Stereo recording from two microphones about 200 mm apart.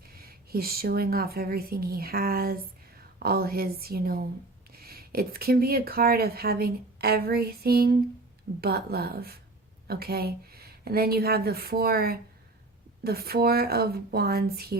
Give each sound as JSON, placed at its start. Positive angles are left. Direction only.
{"t": 0.1, "sound": "speech", "side_deg": -50}